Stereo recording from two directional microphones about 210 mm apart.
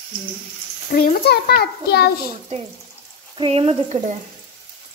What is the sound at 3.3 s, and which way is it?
Frying, 25° right (ahead or behind).